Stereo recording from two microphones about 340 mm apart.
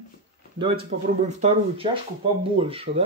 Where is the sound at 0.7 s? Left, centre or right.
Right.